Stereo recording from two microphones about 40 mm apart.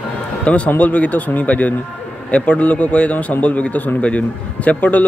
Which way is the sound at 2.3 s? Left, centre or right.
Left.